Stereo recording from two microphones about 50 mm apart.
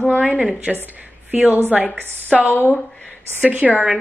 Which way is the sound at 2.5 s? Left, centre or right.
Left.